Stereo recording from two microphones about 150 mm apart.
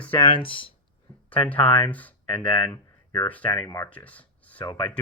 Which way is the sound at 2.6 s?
25° left (ahead or behind).